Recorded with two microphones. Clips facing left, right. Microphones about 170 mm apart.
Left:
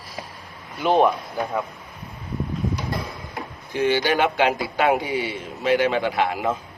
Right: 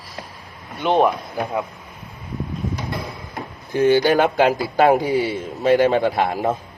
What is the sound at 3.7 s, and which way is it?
A man's voice, 45° right (ahead or behind).